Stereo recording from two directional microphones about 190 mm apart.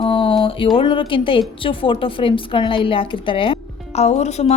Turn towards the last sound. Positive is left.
turn(degrees=35)  # may be behind; listen again after turning